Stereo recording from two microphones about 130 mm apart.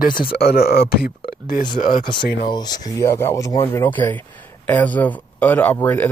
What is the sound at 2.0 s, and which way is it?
Speech, 35° left (ahead or behind).